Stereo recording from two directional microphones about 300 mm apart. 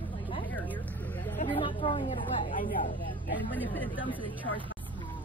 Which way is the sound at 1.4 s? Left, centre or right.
Left.